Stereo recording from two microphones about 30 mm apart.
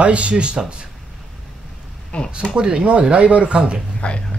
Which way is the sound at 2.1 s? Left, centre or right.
Left.